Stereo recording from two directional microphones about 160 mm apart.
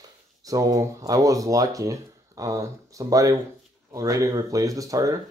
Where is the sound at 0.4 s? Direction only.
20° right (ahead or behind).